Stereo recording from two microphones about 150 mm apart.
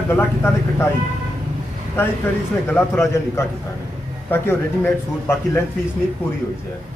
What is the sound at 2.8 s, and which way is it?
Speech, 15° left (ahead or behind).